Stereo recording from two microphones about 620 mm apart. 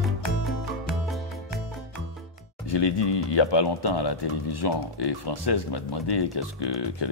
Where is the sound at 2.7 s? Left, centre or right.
Left.